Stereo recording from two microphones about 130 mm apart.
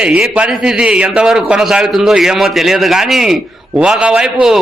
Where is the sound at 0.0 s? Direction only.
10° right (ahead or behind).